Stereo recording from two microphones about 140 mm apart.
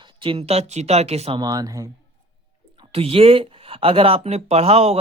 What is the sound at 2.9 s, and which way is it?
Speech, 45° right (ahead or behind).